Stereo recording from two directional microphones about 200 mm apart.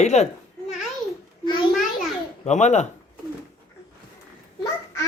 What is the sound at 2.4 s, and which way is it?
Speech, 35° left (ahead or behind).